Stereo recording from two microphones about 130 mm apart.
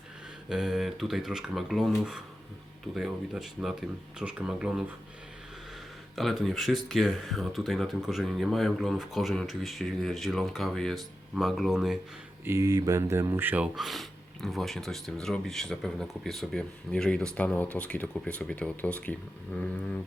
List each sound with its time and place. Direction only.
0.4 s speech: 5° right (ahead or behind)
6.1 s speech: centre (ahead or behind)
12.5 s speech: 25° right (ahead or behind)
13.7 s speech: centre (ahead or behind)